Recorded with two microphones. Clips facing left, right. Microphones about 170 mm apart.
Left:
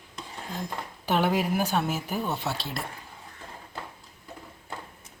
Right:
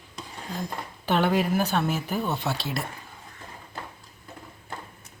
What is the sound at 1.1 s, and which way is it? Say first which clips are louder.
A woman's voice: right 2 dB; 5° left (ahead or behind).